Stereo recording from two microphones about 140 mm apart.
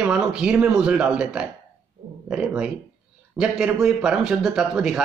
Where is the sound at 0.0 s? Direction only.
5° right (ahead or behind).